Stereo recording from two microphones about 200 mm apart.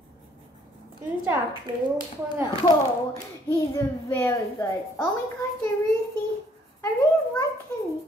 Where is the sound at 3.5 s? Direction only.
10° left (ahead or behind).